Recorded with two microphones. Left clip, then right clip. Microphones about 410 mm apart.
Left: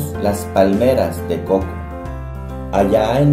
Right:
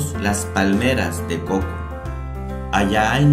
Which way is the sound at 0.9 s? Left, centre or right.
Centre.